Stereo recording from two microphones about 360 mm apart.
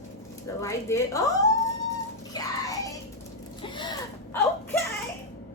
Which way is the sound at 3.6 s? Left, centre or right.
Centre.